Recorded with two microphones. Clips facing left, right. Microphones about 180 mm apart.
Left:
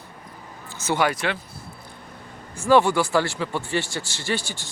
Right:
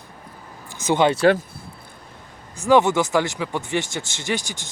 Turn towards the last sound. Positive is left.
turn(degrees=-15)  # may be behind; listen again after turning